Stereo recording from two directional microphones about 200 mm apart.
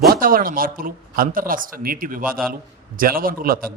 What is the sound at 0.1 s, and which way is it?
Speech, 45° right (ahead or behind).